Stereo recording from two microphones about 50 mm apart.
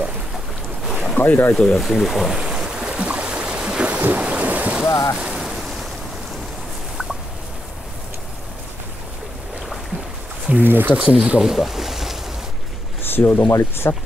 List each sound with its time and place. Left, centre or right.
1.1 s speech: left
1.5 s speech: centre
1.8 s speech: centre
2.3 s boat: centre
4.1 s thunder: right
4.8 s speech: left
5.1 s speech: centre
5.4 s waves: centre
10.5 s speech: right
11.0 s speech: centre
11.5 s boat: centre
13.0 s speech: left
13.9 s speech: left